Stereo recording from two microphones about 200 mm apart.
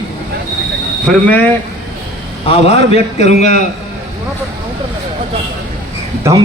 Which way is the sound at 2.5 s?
30° left (ahead or behind).